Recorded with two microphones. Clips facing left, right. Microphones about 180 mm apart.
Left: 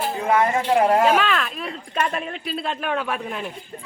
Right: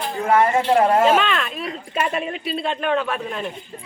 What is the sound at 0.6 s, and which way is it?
A man's voice, 10° left (ahead or behind).